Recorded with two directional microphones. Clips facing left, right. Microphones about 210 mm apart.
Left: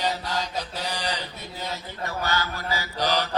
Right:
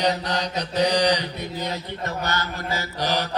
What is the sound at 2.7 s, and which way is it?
Mantra, 45° right (ahead or behind).